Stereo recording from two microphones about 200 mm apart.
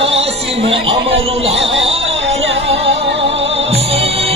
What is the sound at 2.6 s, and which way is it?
Music, 30° right (ahead or behind).